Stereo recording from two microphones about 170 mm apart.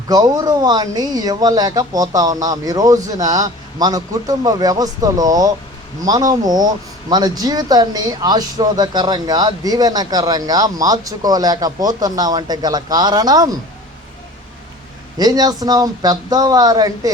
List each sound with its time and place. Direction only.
0.1 s speech: 20° right (ahead or behind)
15.2 s speech: 25° right (ahead or behind)